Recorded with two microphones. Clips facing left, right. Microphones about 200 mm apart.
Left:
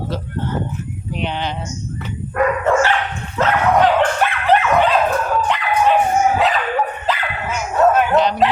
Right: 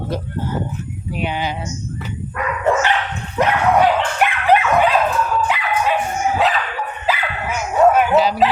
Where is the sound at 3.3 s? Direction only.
15° right (ahead or behind).